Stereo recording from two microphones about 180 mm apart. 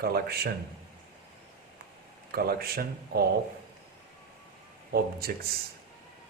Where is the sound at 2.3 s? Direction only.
60° right (ahead or behind).